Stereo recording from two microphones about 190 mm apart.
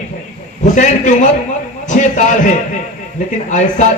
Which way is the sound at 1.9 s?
40° left (ahead or behind).